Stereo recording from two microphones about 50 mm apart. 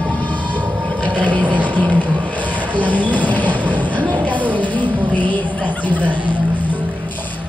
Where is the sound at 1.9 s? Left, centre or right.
Left.